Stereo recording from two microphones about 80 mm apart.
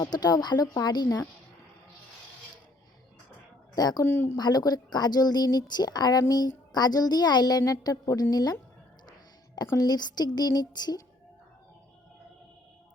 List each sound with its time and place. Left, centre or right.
0.0 s a woman's voice: left
3.8 s a woman's voice: left
4.0 s speech: left
4.4 s a woman's voice: left
7.6 s a woman's voice: left
9.7 s a woman's voice: left